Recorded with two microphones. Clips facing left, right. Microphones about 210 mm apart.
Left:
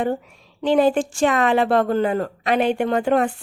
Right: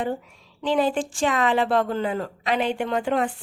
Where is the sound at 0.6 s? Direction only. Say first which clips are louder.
Left 5 dB; 60° left (ahead or behind).